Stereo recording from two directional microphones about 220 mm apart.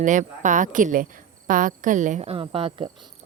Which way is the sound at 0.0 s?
35° right (ahead or behind).